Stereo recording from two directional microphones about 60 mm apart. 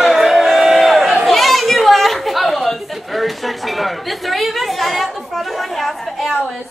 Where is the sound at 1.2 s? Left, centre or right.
Centre.